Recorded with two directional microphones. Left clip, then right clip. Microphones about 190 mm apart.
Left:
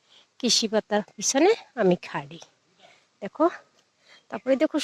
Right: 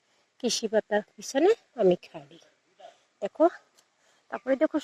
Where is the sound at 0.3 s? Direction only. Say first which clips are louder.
Left 3 dB; 15° left (ahead or behind).